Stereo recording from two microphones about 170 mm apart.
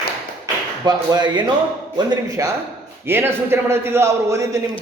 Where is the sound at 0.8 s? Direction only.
25° right (ahead or behind).